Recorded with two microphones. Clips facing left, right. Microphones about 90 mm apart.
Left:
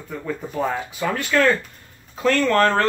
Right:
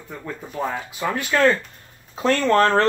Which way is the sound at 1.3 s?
25° right (ahead or behind).